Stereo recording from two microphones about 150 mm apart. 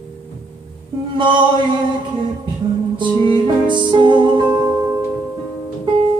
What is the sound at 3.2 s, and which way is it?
Music, 30° right (ahead or behind).